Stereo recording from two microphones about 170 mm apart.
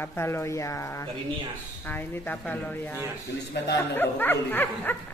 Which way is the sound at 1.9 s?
10° left (ahead or behind).